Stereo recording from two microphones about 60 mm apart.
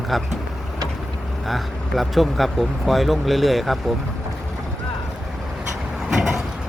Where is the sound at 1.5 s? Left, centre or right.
Centre.